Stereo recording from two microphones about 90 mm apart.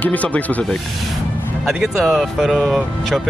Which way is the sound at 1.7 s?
Centre (ahead or behind).